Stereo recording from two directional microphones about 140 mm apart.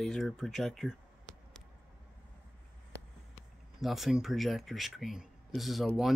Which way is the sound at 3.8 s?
Centre (ahead or behind).